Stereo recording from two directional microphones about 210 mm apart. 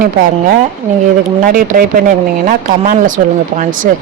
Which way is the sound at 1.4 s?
40° right (ahead or behind).